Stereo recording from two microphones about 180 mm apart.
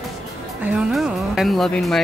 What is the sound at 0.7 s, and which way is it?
Speech, 5° right (ahead or behind).